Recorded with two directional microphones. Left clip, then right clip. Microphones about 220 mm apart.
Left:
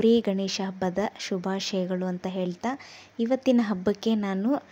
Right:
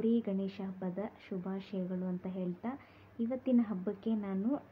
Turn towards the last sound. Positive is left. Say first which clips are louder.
# left 10 dB
turn(degrees=40)  # may be behind; listen again after turning